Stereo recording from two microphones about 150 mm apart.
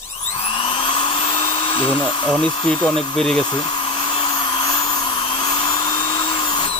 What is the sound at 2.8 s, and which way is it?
Speech, 10° left (ahead or behind).